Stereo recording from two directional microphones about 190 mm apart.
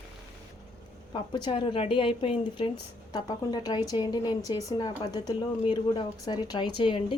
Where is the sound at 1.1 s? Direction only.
25° left (ahead or behind).